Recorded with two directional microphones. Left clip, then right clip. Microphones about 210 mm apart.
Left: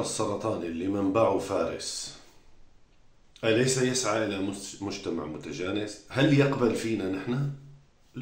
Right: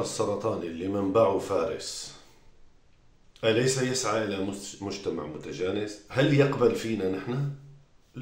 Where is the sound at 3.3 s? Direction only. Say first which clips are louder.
Even; 5° right (ahead or behind).